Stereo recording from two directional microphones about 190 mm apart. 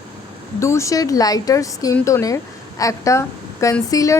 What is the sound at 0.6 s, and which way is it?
Speech, 15° left (ahead or behind).